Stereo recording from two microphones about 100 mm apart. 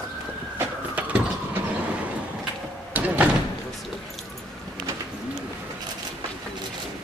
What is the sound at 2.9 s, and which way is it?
Door, 20° right (ahead or behind).